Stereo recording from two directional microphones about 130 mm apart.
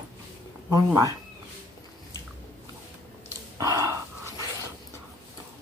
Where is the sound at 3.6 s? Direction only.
30° right (ahead or behind).